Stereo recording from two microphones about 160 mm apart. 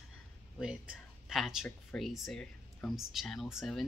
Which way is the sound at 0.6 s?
5° right (ahead or behind).